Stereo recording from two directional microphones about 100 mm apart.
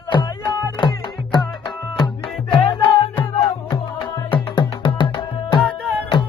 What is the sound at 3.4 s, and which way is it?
Music, 50° left (ahead or behind).